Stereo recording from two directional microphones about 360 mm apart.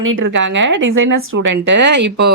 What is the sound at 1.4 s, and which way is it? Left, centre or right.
Speech, right.